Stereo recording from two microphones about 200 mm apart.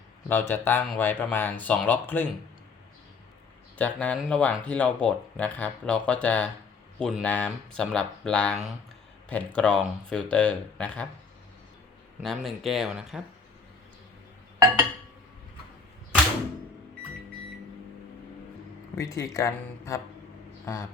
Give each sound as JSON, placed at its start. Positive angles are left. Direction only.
{"t": 0.3, "sound": "speech", "side_deg": 10}
{"t": 3.8, "sound": "speech", "side_deg": 5}
{"t": 12.2, "sound": "speech", "side_deg": 0}
{"t": 18.9, "sound": "speech", "side_deg": 15}